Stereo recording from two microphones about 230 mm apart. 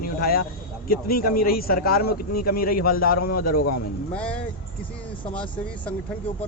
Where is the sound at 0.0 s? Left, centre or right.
Left.